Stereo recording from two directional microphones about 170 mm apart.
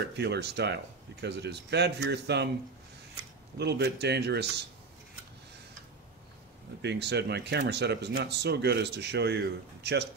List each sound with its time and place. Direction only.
0.1 s speech: 75° right (ahead or behind)
3.5 s a man's voice: 80° right
6.8 s speech: 85° right